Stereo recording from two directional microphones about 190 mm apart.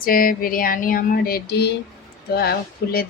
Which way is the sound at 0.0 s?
50° left (ahead or behind).